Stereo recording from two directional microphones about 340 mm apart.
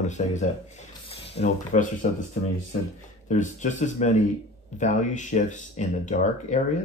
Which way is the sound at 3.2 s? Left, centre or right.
Left.